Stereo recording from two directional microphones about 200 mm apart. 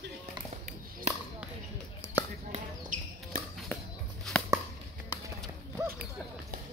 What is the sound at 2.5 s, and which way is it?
Basketball bounce, 40° right (ahead or behind).